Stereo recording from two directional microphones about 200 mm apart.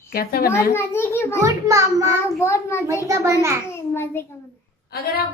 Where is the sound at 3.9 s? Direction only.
10° left (ahead or behind).